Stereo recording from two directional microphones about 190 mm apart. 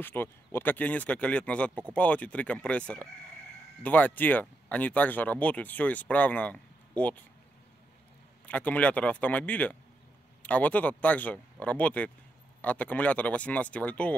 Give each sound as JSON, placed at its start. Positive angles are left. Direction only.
{"t": 0.0, "sound": "speech", "side_deg": 10}
{"t": 8.5, "sound": "speech", "side_deg": 5}